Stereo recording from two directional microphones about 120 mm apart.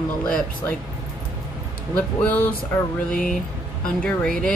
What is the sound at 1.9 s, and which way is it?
A woman's voice, 15° left (ahead or behind).